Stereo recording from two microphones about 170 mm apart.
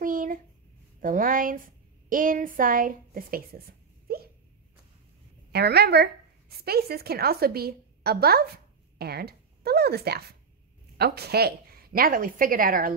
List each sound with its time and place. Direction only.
0.0 s a sound: 50° right (ahead or behind)
1.0 s a woman's voice: 55° right (ahead or behind)
5.5 s a woman's voice: 70° right (ahead or behind); by 12.9 s 55° right (ahead or behind)